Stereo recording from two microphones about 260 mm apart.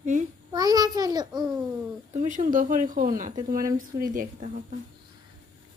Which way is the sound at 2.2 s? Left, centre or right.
Right.